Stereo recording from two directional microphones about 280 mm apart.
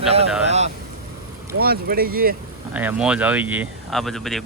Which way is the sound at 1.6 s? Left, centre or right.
Right.